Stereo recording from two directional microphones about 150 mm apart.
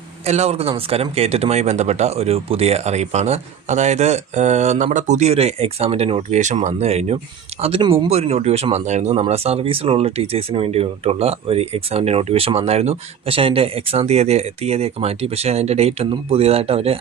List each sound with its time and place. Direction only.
0.3 s speech: 45° right (ahead or behind)